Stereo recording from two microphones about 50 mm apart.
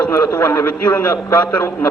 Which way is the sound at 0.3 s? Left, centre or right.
Left.